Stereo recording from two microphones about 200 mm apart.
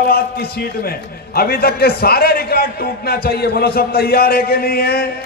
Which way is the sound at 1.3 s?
50° left (ahead or behind).